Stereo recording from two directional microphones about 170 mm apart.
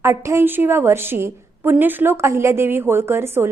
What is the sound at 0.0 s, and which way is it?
A woman's voice, 15° right (ahead or behind).